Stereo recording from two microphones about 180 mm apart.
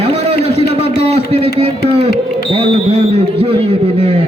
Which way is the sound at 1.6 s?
35° right (ahead or behind).